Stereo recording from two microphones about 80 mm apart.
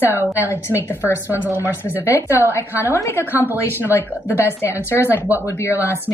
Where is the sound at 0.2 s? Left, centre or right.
Right.